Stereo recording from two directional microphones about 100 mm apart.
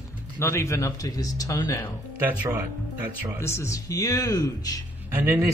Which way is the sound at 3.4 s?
30° left (ahead or behind).